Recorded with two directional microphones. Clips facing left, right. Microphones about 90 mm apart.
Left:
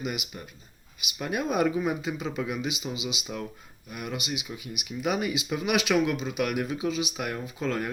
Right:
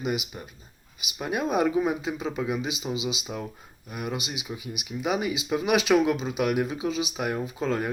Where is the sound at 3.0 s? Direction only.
30° right (ahead or behind).